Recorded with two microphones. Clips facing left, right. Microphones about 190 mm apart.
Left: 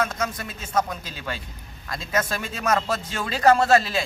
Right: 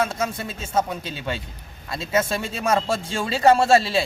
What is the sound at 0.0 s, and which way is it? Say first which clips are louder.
Speech: right 2 dB; 30° right (ahead or behind).